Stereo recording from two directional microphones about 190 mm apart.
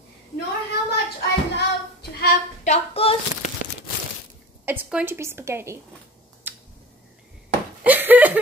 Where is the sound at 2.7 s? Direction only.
35° left (ahead or behind).